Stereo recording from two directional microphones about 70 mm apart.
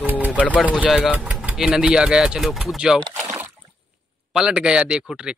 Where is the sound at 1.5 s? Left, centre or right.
Centre.